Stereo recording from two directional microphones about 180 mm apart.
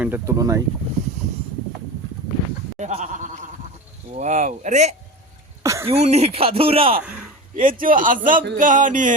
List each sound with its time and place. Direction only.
0.0 s speech: 15° right (ahead or behind)
2.7 s speech: 40° right (ahead or behind)
5.6 s a sound: 15° right (ahead or behind)
5.9 s speech: 35° right (ahead or behind)
7.5 s speech: 50° right (ahead or behind)